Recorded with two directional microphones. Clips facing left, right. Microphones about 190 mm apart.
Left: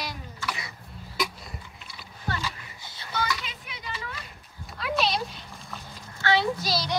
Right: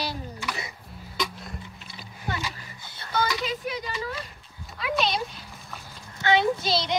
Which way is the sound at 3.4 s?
40° right (ahead or behind).